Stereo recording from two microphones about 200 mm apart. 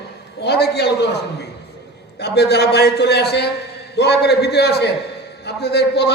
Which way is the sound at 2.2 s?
55° left (ahead or behind).